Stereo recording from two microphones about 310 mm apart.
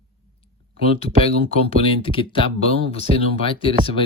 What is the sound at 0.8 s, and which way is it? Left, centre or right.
Speech, centre.